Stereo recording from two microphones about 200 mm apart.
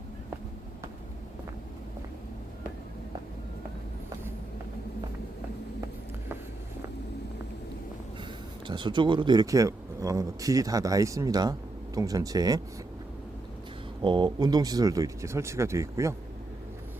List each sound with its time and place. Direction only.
8.6 s speech: 25° right (ahead or behind)
14.0 s speech: 25° right (ahead or behind)